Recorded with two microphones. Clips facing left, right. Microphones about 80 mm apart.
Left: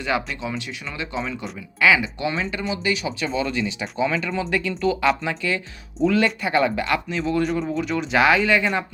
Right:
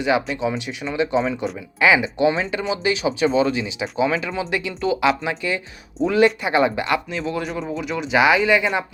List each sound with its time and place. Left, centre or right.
0.1 s speech: centre
0.9 s speech: right; by 8.8 s centre